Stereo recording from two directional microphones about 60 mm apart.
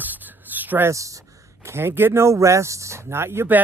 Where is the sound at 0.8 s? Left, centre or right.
Right.